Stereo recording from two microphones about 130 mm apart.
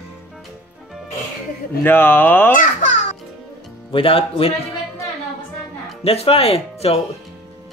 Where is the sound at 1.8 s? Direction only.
15° left (ahead or behind).